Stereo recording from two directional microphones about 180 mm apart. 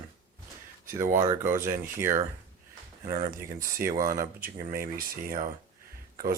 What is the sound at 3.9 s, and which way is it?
Speech, 50° right (ahead or behind).